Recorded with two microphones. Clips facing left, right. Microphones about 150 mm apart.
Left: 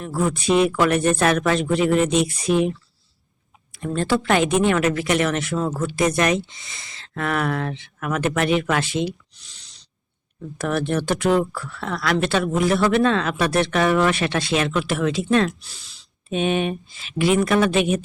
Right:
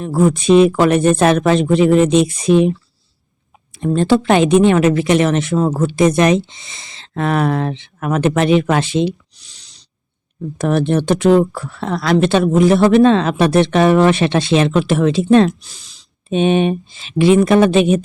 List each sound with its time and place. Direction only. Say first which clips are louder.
0.0 s speech: right 8 dB; 25° right (ahead or behind)
3.8 s speech: right 8 dB; 20° right (ahead or behind)
10.6 s speech: right 7 dB; 20° right (ahead or behind)
15.6 s speech: right 2 dB; 15° right (ahead or behind)